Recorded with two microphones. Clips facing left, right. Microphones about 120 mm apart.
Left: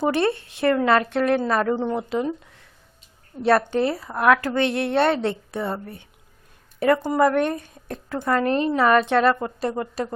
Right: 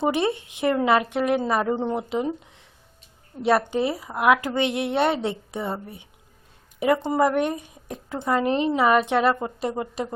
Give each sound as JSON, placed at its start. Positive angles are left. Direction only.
{"t": 0.0, "sound": "a woman's voice", "side_deg": -15}
{"t": 1.7, "sound": "a woman's voice", "side_deg": -25}